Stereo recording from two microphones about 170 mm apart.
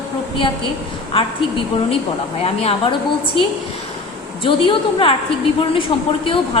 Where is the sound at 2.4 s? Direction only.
35° left (ahead or behind).